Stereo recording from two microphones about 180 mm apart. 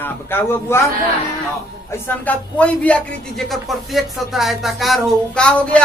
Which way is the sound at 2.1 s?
10° left (ahead or behind).